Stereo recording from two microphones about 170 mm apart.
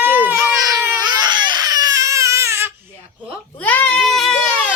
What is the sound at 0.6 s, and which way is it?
Baby cry, 25° right (ahead or behind).